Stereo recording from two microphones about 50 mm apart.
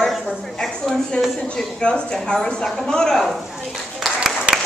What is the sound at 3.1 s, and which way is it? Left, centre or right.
Speech, centre.